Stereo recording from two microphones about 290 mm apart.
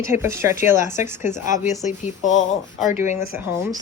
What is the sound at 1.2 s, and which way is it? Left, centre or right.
A woman's voice, left.